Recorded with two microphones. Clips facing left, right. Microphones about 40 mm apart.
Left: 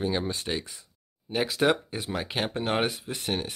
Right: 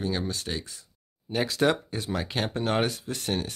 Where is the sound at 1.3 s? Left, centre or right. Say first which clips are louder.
Even; centre.